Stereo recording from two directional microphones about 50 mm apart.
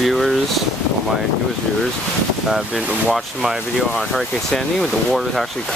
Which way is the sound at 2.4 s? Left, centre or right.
Centre.